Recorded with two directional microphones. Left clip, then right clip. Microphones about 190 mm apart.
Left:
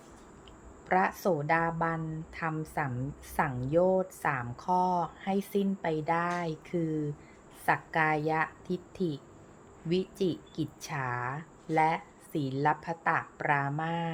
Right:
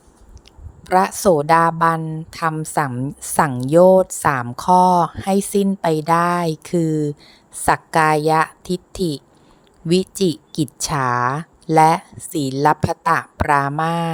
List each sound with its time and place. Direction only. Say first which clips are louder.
0.9 s a woman's voice: right 12 dB; 45° right (ahead or behind)